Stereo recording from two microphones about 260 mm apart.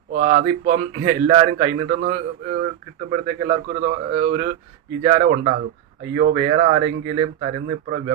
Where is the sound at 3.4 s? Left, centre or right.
Right.